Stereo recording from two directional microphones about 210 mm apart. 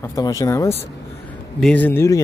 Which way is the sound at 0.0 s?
15° left (ahead or behind).